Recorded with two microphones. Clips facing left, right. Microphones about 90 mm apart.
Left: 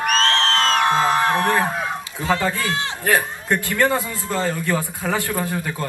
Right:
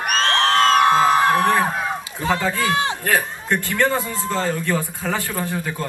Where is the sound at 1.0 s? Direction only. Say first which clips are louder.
Right 2 dB; centre (ahead or behind).